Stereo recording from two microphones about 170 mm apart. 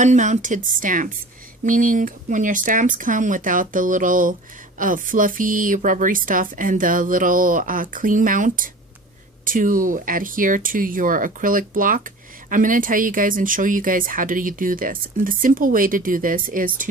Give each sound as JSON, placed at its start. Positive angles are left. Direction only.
{"t": 0.0, "sound": "speech", "side_deg": -45}